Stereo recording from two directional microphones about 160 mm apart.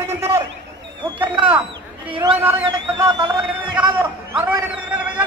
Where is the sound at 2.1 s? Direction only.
30° right (ahead or behind).